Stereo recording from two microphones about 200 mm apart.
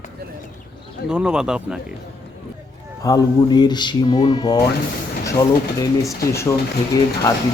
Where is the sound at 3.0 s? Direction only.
20° left (ahead or behind).